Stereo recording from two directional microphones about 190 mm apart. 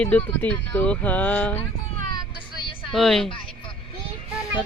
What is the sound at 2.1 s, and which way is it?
Vehicle, 25° left (ahead or behind).